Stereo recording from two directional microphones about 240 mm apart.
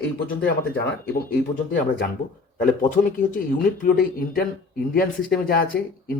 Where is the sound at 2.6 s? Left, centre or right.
Left.